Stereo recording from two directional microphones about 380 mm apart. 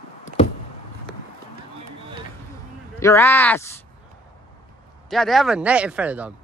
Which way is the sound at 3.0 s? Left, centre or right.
Centre.